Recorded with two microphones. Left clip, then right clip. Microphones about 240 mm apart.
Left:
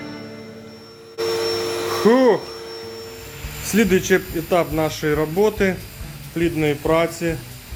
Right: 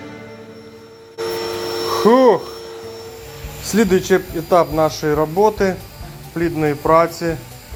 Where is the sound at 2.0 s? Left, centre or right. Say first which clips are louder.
Right 3 dB; centre.